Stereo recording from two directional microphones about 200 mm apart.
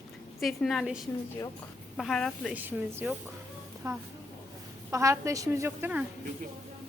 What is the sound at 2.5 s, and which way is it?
A woman's voice, 10° right (ahead or behind).